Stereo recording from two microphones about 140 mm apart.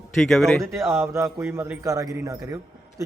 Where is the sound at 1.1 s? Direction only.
20° right (ahead or behind).